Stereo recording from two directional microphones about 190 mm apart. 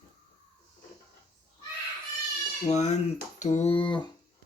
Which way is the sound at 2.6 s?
35° left (ahead or behind).